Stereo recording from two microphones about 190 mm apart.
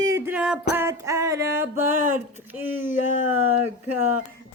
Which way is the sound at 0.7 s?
15° right (ahead or behind).